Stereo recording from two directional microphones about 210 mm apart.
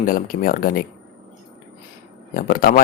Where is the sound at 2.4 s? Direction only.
40° left (ahead or behind).